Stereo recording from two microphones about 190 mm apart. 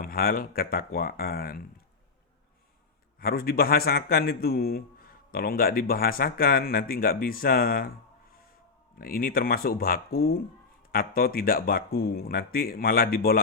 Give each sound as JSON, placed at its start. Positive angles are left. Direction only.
{"t": 0.0, "sound": "a man's voice", "side_deg": 50}
{"t": 3.2, "sound": "a man's voice", "side_deg": 50}
{"t": 9.0, "sound": "a man's voice", "side_deg": 50}